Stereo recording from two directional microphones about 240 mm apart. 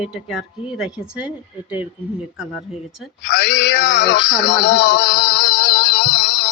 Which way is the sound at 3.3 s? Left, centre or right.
Left.